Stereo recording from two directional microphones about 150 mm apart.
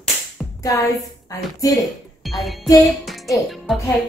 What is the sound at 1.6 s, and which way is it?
Speech, 25° left (ahead or behind).